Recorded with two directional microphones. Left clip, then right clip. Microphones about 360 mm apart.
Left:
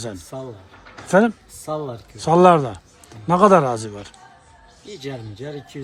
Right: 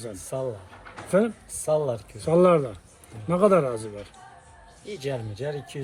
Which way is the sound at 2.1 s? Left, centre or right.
Left.